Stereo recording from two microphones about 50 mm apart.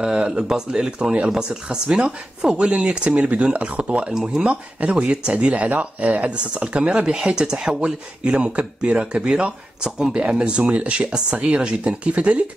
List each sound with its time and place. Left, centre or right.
0.0 s speech: centre
4.1 s speech: centre